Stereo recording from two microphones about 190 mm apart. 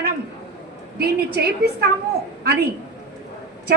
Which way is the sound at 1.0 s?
55° right (ahead or behind).